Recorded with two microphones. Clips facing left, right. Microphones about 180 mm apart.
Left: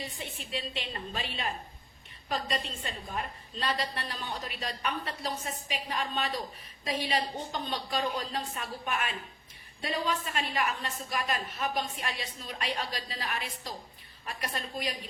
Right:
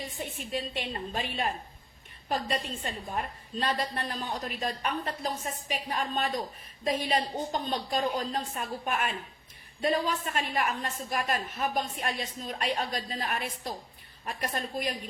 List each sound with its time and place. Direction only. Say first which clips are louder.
0.2 s a woman's voice: right 4 dB; 45° right (ahead or behind)